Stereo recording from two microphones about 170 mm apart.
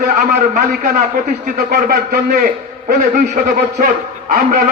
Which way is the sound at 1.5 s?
60° right (ahead or behind).